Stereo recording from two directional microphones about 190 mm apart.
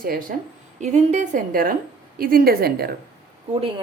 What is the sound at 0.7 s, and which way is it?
A woman's voice, 40° right (ahead or behind).